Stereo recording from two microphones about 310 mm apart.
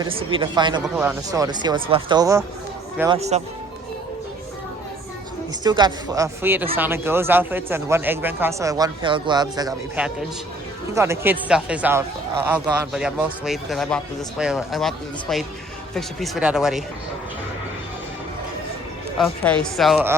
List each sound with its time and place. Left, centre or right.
0.0 s speech: centre
5.6 s a man's voice: centre
19.7 s a man's voice: centre